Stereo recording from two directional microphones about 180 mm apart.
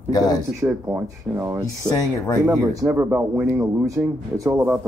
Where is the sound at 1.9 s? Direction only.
15° left (ahead or behind).